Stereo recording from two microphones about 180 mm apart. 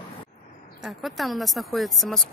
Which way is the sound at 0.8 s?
Centre (ahead or behind).